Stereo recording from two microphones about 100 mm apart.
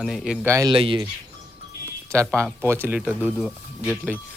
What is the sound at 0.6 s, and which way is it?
Speech, 60° right (ahead or behind).